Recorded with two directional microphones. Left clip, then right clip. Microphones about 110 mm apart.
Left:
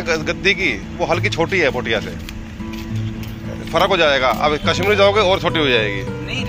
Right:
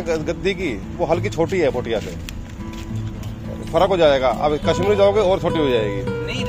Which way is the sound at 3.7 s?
25° right (ahead or behind).